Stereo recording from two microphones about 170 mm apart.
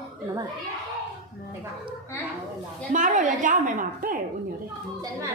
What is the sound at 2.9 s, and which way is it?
A woman's voice, 50° right (ahead or behind).